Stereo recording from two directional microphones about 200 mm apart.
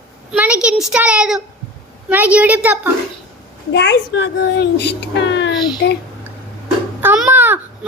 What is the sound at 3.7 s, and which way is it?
A child's voice, 60° left (ahead or behind).